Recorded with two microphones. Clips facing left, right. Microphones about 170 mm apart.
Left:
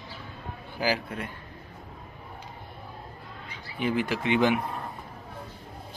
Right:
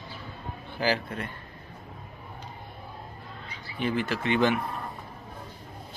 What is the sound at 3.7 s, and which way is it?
Speech, 10° left (ahead or behind).